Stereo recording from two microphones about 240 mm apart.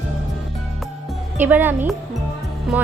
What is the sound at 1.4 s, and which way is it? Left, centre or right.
Speech, centre.